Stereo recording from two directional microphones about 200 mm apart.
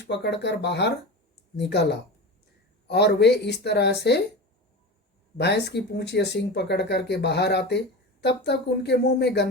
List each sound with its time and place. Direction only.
0.1 s speech: 60° left (ahead or behind)
5.4 s speech: 55° left (ahead or behind)